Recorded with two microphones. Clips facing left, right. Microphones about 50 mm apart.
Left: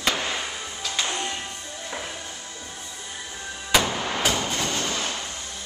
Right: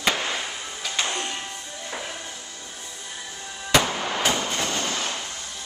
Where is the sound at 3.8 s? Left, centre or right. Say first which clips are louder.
Even; centre.